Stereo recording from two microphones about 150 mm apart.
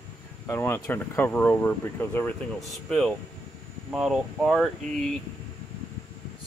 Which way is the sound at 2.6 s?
Centre (ahead or behind).